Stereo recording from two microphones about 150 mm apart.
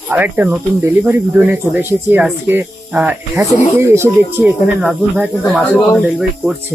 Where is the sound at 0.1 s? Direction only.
10° right (ahead or behind).